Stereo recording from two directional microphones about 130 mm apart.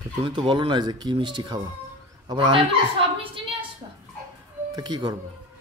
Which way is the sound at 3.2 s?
45° right (ahead or behind).